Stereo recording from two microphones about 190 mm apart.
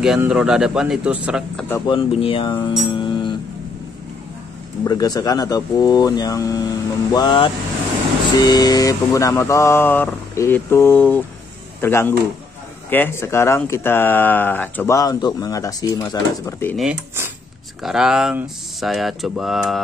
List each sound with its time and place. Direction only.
0.0 s speech: 5° right (ahead or behind)
1.9 s speech: 30° left (ahead or behind)
4.8 s speech: 20° left (ahead or behind)
16.7 s speech: 5° right (ahead or behind)